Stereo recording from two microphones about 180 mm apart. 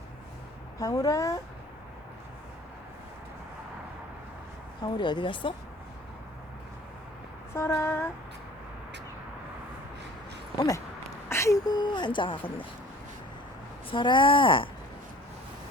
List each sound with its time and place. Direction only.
0.8 s speech: 20° left (ahead or behind)
4.8 s speech: 25° left (ahead or behind)
7.5 s female singing: 15° left (ahead or behind)
11.3 s speech: 15° left (ahead or behind)
13.9 s speech: 25° left (ahead or behind)